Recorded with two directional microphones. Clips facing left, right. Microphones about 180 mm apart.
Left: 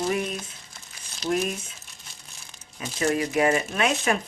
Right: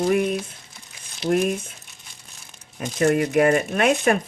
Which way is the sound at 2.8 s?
50° right (ahead or behind).